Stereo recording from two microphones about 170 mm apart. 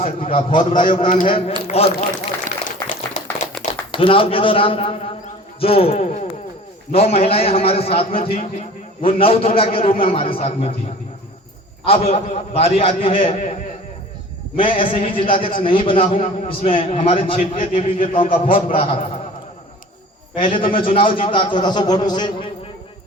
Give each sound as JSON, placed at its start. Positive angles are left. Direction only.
{"t": 0.0, "sound": "a man's voice", "side_deg": 35}
{"t": 2.5, "sound": "a sound", "side_deg": 45}
{"t": 3.6, "sound": "a man's voice", "side_deg": 30}
{"t": 11.9, "sound": "a man's voice", "side_deg": 35}
{"t": 20.3, "sound": "a man's voice", "side_deg": 30}